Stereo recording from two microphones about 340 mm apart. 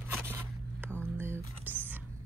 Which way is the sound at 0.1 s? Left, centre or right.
Centre.